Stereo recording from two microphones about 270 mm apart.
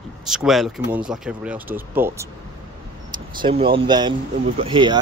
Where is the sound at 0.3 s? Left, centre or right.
Centre.